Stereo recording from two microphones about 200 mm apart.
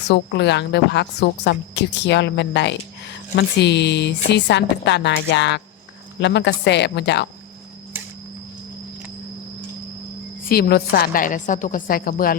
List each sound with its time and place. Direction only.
0.1 s a woman's voice: 60° left (ahead or behind)
10.5 s a woman's voice: 50° left (ahead or behind)